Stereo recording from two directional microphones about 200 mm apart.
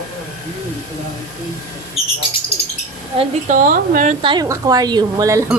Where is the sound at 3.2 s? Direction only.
40° right (ahead or behind).